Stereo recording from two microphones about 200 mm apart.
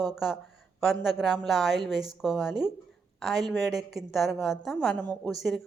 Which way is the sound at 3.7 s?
Centre (ahead or behind).